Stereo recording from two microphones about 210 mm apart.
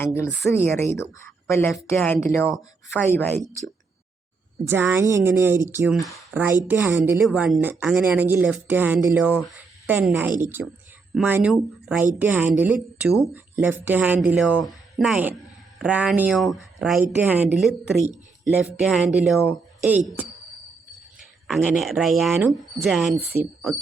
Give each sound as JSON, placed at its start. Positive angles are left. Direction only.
{"t": 0.0, "sound": "a woman's voice", "side_deg": 10}
{"t": 4.6, "sound": "speech", "side_deg": -10}
{"t": 10.6, "sound": "speech", "side_deg": -60}
{"t": 11.1, "sound": "speech", "side_deg": -5}
{"t": 21.4, "sound": "speech", "side_deg": -5}
{"t": 22.4, "sound": "speech", "side_deg": -10}